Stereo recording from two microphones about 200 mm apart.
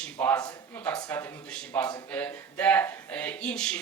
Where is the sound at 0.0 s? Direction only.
5° left (ahead or behind).